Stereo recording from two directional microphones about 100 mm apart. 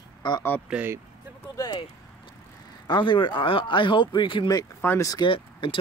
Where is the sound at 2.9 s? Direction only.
55° left (ahead or behind).